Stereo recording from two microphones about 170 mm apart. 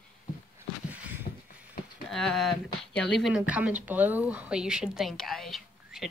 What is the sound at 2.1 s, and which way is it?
Speech, centre (ahead or behind).